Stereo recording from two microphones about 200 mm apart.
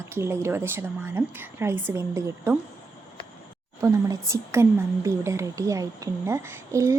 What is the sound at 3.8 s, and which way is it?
A woman's voice, 15° right (ahead or behind).